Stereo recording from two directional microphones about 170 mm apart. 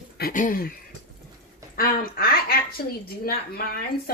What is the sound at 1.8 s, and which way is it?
A woman's voice, 60° left (ahead or behind).